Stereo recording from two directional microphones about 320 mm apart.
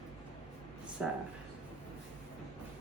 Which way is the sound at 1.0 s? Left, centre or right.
Centre.